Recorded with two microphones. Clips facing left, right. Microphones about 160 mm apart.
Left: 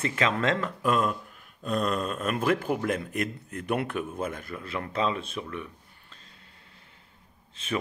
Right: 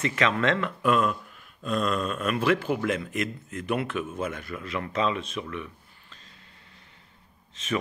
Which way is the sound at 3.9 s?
35° left (ahead or behind).